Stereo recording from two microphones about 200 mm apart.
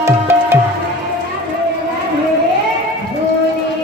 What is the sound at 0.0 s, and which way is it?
Tabla, 15° right (ahead or behind).